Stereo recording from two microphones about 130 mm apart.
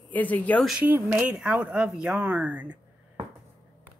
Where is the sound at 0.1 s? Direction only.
10° left (ahead or behind).